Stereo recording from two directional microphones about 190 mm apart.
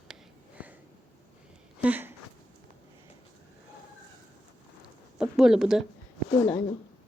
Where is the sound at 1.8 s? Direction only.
10° right (ahead or behind).